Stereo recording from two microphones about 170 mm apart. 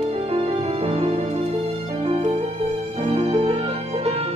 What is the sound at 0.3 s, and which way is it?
Music, 35° right (ahead or behind).